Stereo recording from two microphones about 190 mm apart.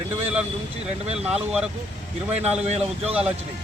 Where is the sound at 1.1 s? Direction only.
5° right (ahead or behind).